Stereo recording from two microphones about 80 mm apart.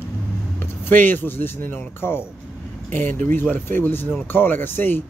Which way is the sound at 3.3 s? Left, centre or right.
Left.